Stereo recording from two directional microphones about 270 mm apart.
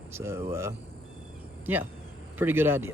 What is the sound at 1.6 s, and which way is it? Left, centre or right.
Speech, centre.